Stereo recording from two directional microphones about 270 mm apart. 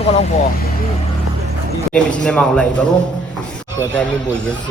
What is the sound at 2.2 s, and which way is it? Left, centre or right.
Speech, centre.